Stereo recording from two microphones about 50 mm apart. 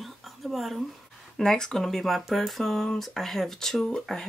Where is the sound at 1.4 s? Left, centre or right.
Centre.